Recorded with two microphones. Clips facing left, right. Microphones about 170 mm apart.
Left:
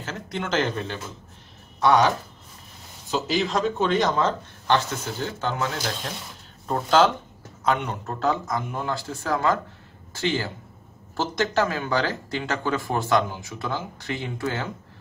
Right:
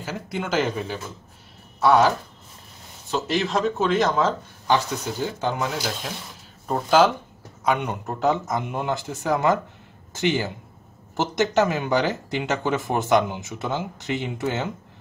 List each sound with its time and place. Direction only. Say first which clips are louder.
0.0 s speech: right 2 dB; 10° right (ahead or behind)
11.5 s speech: right 3 dB; 20° right (ahead or behind)